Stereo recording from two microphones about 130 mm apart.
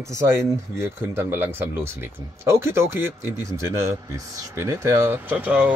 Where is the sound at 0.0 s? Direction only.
25° right (ahead or behind).